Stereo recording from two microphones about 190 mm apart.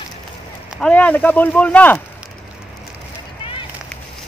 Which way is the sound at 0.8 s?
5° left (ahead or behind).